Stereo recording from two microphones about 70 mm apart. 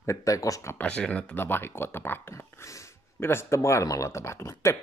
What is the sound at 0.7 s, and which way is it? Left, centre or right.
Speech, centre.